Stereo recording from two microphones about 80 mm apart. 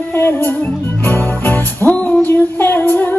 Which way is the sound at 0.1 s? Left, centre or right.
Left.